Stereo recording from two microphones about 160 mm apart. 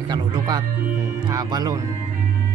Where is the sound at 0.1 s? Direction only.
25° right (ahead or behind).